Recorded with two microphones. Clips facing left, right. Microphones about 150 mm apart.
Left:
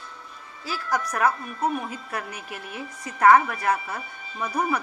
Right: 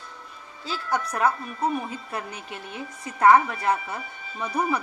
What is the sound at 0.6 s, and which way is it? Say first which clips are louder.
A woman's voice: even; 25° right (ahead or behind).